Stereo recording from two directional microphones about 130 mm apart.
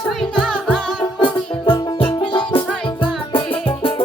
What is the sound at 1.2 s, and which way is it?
Music, 40° left (ahead or behind).